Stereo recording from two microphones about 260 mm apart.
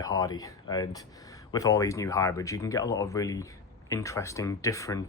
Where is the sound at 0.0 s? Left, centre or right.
Centre.